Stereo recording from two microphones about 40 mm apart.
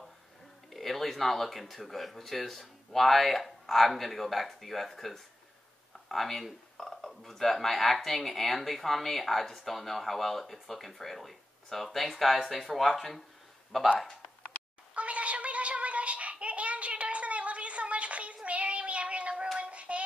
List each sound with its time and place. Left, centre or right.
0.7 s speech: centre
15.0 s a sound: right
19.6 s hands: right